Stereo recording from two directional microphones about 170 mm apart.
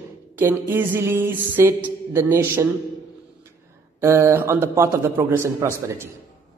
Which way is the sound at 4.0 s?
15° right (ahead or behind).